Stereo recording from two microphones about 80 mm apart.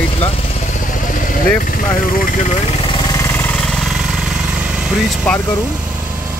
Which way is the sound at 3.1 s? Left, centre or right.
Left.